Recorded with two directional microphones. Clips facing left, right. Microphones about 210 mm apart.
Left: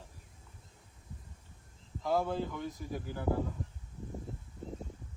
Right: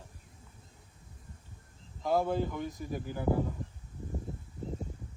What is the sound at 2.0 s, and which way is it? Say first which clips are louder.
Speech: right 3 dB; 15° right (ahead or behind).